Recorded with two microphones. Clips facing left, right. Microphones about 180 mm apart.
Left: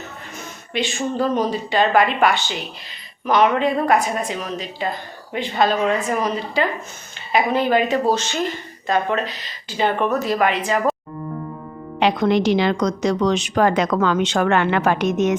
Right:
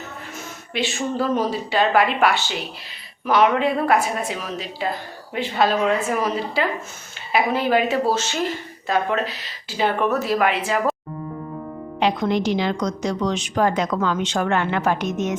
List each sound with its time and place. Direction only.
0.7 s speech: 5° right (ahead or behind)
11.9 s a woman's voice: 75° left (ahead or behind)